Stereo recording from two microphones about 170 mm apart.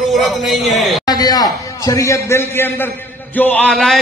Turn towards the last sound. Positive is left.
turn(degrees=5)  # may be behind; listen again after turning